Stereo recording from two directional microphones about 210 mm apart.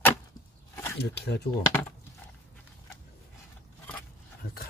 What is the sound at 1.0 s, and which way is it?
Speech, 55° left (ahead or behind).